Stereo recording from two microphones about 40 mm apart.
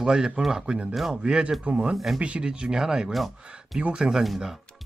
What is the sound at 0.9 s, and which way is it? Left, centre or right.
Speech, centre.